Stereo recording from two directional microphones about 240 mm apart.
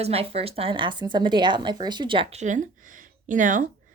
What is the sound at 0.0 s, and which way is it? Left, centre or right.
A woman's voice, right.